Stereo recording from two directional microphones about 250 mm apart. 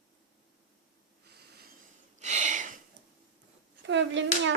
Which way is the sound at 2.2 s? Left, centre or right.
Right.